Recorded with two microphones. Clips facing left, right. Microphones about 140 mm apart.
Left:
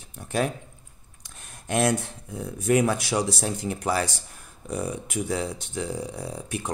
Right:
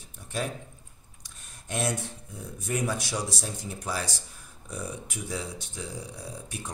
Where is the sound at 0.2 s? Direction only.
65° left (ahead or behind).